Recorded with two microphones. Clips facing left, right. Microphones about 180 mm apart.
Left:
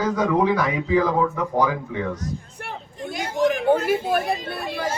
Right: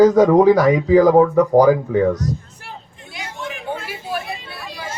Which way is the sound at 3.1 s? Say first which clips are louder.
Left 9 dB; 45° left (ahead or behind).